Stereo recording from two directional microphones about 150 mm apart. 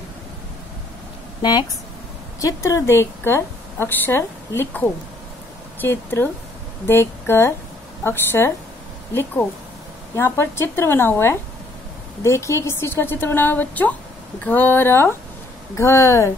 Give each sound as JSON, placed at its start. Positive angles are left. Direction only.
{"t": 1.4, "sound": "a woman's voice", "side_deg": 30}